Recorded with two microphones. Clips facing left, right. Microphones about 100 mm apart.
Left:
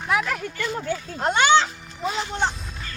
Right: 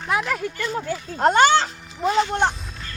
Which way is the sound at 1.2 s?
40° right (ahead or behind).